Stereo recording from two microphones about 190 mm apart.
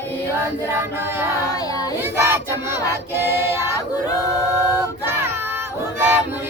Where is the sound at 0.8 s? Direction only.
15° right (ahead or behind).